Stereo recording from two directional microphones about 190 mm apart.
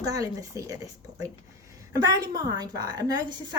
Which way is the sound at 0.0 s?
20° right (ahead or behind).